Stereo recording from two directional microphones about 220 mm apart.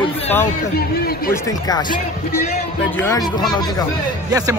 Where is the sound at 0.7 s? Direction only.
45° left (ahead or behind).